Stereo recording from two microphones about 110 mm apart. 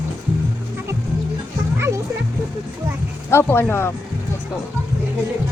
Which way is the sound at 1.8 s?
25° right (ahead or behind).